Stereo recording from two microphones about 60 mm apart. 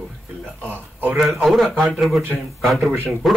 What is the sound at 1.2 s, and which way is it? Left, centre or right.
Speech, centre.